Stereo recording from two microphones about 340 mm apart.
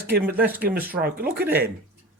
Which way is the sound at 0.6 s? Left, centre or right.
Right.